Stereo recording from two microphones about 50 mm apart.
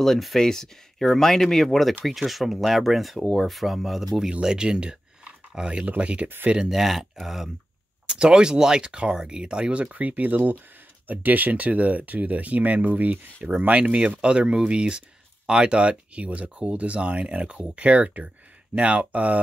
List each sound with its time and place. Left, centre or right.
0.0 s speech: centre; by 6.2 s right
6.6 s speech: centre
8.1 s speech: centre